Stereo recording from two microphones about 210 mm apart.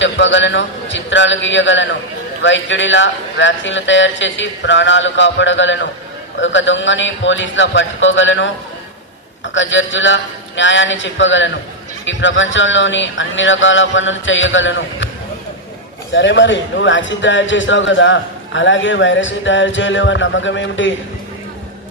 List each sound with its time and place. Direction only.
0.0 s a man's voice: 60° left (ahead or behind)
16.1 s a man's voice: 60° left (ahead or behind)